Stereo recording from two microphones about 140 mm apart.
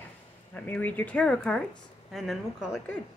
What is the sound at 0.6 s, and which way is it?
A woman's voice, 10° left (ahead or behind).